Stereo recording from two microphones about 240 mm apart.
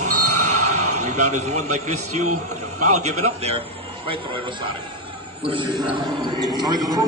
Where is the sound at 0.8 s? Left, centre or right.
Right.